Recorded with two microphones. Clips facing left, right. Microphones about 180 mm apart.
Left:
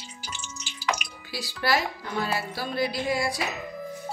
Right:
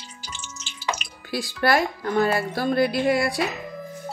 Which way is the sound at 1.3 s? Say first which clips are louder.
Right 5 dB; 55° right (ahead or behind).